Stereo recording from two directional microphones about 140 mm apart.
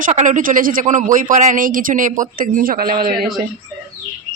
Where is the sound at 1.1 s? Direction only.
65° right (ahead or behind); by 3.3 s 90° right.